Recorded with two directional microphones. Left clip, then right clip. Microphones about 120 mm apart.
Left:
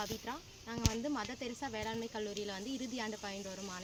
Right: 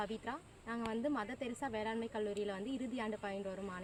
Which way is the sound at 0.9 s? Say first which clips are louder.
Right 4 dB; 30° right (ahead or behind).